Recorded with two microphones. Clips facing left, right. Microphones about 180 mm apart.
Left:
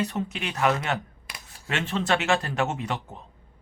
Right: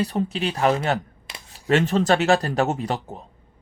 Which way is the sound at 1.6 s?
40° right (ahead or behind).